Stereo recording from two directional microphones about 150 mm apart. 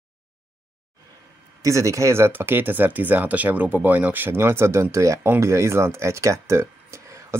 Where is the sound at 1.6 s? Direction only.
20° right (ahead or behind).